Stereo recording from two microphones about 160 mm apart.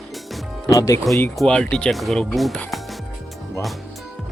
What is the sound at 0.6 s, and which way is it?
Speech, 20° left (ahead or behind).